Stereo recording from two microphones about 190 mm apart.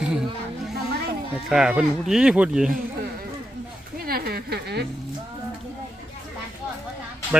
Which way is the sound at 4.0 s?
50° right (ahead or behind).